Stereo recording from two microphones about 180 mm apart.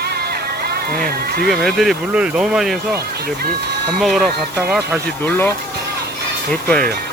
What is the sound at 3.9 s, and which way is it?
Speech, centre (ahead or behind).